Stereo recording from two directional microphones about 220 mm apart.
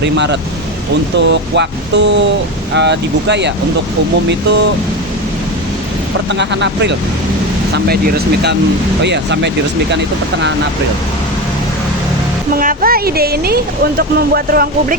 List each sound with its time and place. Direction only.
0.0 s speech: 50° right (ahead or behind)
6.4 s speech: 55° right (ahead or behind)
12.5 s speech: 40° right (ahead or behind)